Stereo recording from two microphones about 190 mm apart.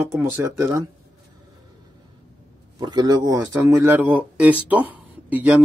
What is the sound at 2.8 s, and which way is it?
Speech, 20° right (ahead or behind).